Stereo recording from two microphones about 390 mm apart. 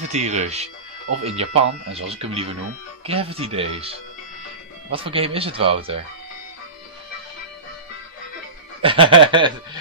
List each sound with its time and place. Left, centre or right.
0.1 s speech: centre
4.9 s speech: centre
8.8 s speech: centre